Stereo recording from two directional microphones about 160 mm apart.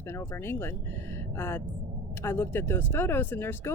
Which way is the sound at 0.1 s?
15° left (ahead or behind).